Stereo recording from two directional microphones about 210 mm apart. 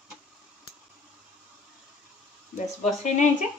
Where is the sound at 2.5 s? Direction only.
35° left (ahead or behind).